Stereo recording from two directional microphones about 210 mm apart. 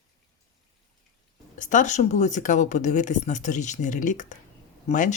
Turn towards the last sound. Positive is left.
turn(degrees=35)  # may be behind; listen again after turning